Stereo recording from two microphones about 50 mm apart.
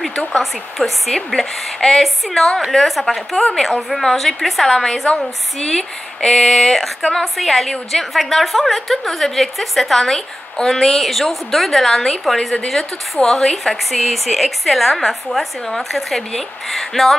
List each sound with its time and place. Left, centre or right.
0.1 s speech: left
0.4 s a woman's voice: centre